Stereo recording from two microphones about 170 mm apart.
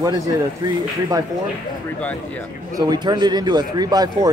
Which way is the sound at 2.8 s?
25° right (ahead or behind).